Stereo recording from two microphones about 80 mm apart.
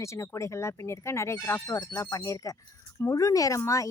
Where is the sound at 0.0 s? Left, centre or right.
Left.